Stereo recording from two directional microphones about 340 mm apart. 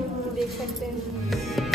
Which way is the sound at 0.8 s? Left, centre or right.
Centre.